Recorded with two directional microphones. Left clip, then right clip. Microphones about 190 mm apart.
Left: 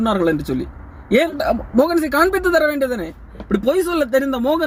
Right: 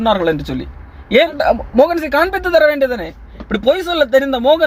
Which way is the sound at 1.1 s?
10° right (ahead or behind).